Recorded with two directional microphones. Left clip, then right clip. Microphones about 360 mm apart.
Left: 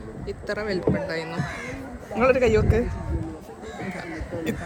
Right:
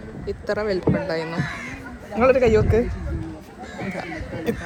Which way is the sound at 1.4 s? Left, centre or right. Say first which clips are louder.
Right 2 dB; left.